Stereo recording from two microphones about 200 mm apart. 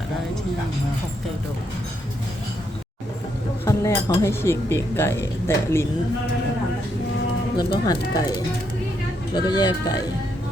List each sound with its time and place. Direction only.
3.7 s speech: 15° left (ahead or behind)
7.5 s speech: 20° left (ahead or behind)